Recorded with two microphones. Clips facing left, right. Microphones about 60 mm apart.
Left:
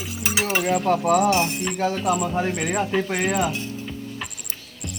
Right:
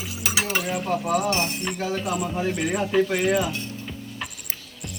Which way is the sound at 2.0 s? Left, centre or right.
Left.